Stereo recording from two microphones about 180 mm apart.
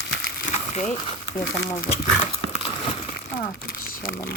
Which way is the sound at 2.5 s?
35° left (ahead or behind).